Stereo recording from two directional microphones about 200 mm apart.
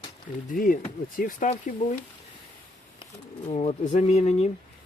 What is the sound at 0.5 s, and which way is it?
Speech, 45° left (ahead or behind).